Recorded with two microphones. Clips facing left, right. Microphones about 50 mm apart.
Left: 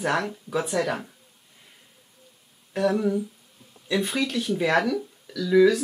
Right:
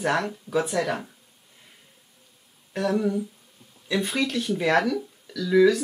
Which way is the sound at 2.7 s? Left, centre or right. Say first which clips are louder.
Left 1 dB; centre.